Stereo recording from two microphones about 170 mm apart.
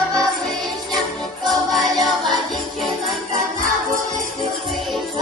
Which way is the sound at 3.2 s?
45° right (ahead or behind).